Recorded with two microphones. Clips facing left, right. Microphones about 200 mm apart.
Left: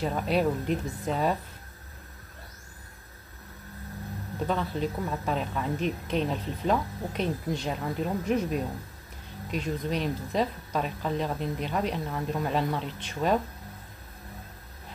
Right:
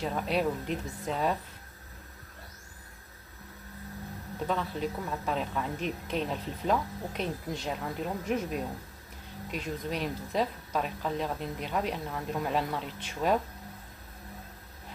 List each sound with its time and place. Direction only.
0.0 s speech: centre (ahead or behind)
4.5 s speech: centre (ahead or behind)